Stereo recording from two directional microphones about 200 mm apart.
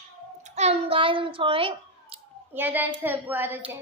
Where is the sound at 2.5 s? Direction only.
10° right (ahead or behind).